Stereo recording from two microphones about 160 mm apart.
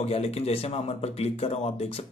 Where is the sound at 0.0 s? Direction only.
40° left (ahead or behind).